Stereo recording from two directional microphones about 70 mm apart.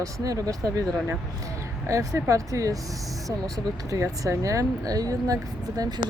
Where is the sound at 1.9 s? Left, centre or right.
Right.